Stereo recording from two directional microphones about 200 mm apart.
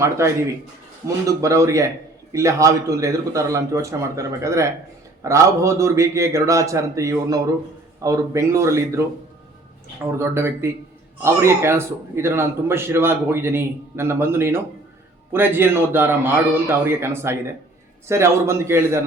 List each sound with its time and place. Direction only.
0.2 s a man's voice: 15° right (ahead or behind)
10.0 s a man's voice: 15° right (ahead or behind)